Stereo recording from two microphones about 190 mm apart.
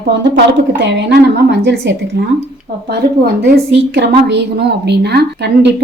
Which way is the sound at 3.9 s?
60° right (ahead or behind).